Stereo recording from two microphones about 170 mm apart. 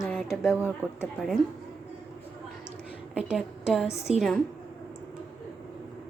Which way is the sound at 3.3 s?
5° right (ahead or behind).